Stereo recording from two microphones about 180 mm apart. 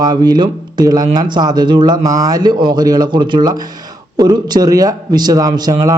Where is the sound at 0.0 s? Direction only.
25° right (ahead or behind).